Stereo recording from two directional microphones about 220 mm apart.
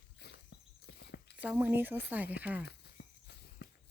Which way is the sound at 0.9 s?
50° left (ahead or behind).